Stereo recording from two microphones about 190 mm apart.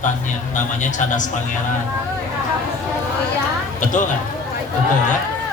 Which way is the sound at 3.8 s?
40° left (ahead or behind).